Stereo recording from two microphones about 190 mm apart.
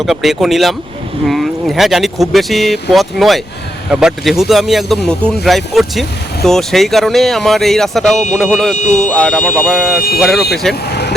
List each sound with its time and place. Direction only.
0.0 s speech: centre (ahead or behind)
8.7 s speech: 40° left (ahead or behind)
9.0 s speech: 5° left (ahead or behind)